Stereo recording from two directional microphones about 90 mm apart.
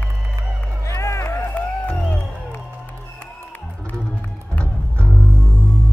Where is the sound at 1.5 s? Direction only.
10° left (ahead or behind).